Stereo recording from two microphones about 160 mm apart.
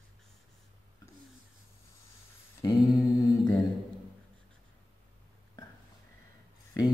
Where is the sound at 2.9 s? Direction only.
Centre (ahead or behind).